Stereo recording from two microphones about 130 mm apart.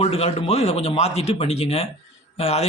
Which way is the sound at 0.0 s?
50° left (ahead or behind).